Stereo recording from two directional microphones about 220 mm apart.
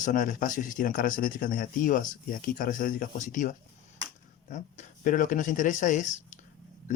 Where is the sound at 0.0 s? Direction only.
35° left (ahead or behind).